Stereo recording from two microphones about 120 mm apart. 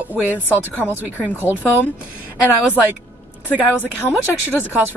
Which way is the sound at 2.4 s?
15° right (ahead or behind).